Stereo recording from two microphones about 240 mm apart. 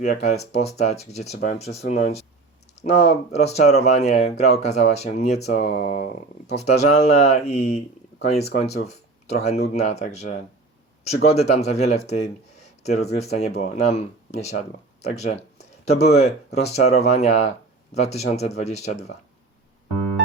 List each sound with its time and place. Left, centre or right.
0.0 s speech: left
3.3 s speech: left